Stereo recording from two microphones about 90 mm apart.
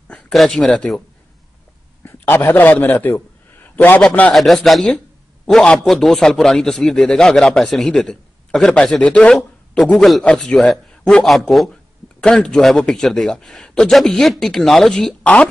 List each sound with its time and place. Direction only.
0.3 s speech: 5° left (ahead or behind)
2.0 s a man's voice: 25° left (ahead or behind)
3.6 s a sound: 20° left (ahead or behind)
4.3 s a man's voice: 5° left (ahead or behind)